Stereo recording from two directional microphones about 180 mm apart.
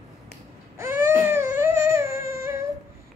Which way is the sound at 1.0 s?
15° right (ahead or behind).